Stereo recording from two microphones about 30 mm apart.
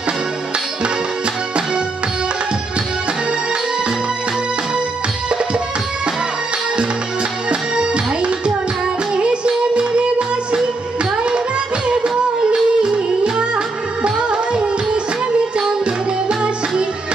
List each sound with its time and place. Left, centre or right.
6.7 s music: right
11.9 s music: right